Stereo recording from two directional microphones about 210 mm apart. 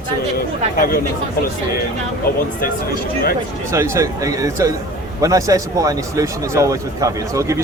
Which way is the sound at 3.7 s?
15° right (ahead or behind).